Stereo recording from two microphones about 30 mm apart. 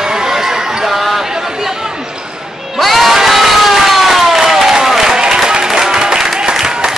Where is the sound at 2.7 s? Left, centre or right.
Centre.